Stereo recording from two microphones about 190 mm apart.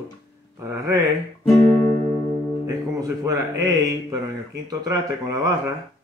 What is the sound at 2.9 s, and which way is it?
A man's voice, 15° right (ahead or behind).